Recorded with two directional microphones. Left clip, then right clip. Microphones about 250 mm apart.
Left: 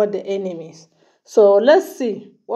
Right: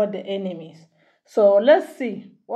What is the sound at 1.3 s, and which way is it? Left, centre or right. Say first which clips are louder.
Speech: left 3 dB; left.